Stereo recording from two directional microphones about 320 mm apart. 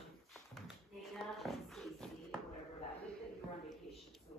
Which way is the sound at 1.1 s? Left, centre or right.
Centre.